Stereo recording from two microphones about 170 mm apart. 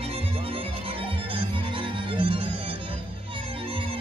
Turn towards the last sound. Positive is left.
turn(degrees=-30)  # may be behind; listen again after turning